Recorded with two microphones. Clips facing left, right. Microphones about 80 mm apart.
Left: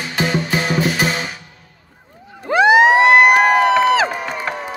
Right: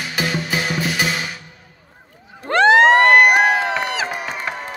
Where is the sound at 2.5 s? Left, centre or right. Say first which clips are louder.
Left 1 dB; centre.